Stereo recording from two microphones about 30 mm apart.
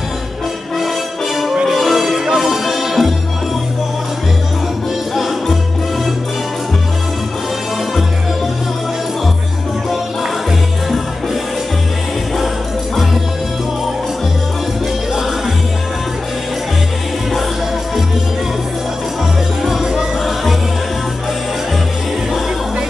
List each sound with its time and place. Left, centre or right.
0.7 s music: centre
5.1 s music: centre
19.6 s music: centre